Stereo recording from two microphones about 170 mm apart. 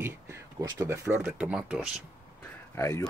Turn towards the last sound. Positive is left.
turn(degrees=15)  # may be behind; listen again after turning